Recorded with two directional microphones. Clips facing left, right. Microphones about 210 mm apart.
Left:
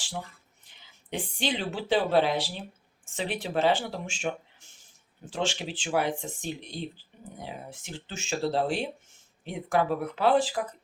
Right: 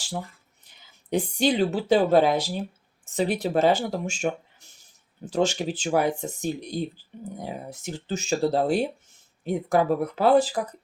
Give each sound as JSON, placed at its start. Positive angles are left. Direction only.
{"t": 1.1, "sound": "speech", "side_deg": -40}